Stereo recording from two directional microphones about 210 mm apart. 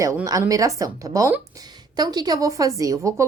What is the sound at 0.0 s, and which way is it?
A woman's voice, 15° right (ahead or behind).